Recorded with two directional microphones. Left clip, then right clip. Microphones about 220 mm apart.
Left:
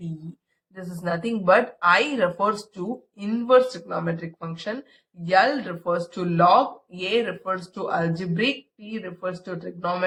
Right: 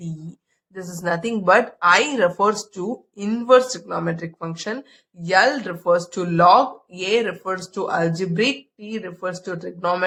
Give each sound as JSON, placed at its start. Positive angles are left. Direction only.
{"t": 0.7, "sound": "speech", "side_deg": -50}